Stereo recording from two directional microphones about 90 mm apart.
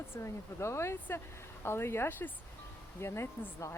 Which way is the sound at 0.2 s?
30° left (ahead or behind).